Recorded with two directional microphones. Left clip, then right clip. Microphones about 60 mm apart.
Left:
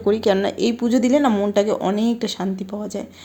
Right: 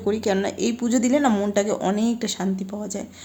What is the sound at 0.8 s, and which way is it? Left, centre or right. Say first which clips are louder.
Speech: left 3 dB; left.